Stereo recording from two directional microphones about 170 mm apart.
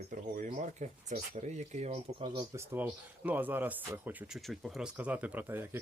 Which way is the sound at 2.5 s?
15° right (ahead or behind).